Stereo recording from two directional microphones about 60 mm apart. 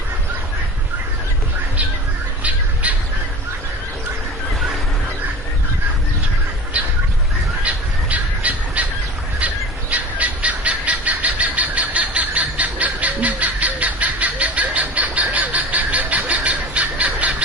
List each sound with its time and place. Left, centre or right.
2.8 s crow: right
6.8 s a sound: right
8.1 s squawk: right
9.9 s bird: right